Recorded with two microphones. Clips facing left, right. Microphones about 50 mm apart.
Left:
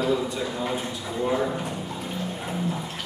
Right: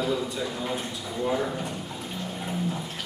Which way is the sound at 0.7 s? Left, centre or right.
Centre.